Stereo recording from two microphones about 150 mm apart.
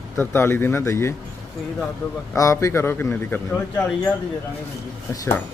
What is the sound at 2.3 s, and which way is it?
Speech, 20° left (ahead or behind).